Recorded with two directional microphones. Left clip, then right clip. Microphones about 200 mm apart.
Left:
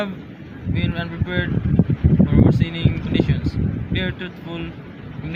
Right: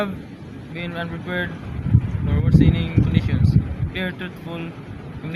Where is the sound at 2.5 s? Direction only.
5° left (ahead or behind).